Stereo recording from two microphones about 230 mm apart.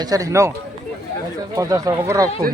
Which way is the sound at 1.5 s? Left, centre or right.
Centre.